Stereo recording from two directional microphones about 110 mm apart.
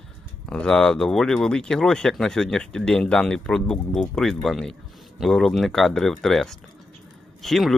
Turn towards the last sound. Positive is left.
turn(degrees=0)  # may be behind; listen again after turning